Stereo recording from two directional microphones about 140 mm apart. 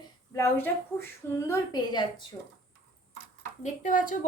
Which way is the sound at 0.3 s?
15° left (ahead or behind).